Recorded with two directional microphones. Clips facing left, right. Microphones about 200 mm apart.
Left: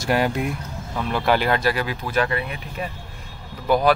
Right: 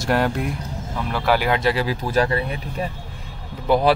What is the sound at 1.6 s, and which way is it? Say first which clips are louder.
Speech: right 2 dB; 30° right (ahead or behind).